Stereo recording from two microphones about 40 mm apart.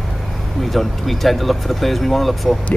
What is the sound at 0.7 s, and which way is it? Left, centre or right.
Speech, centre.